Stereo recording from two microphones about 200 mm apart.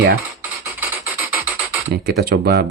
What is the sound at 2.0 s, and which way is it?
Speech, 50° right (ahead or behind).